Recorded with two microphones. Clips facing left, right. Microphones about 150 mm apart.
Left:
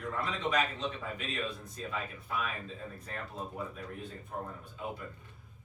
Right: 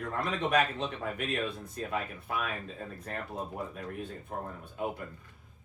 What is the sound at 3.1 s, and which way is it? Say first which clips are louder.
A man's voice: right 4 dB; 60° right (ahead or behind).